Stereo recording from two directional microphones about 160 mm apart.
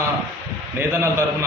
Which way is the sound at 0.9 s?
15° right (ahead or behind).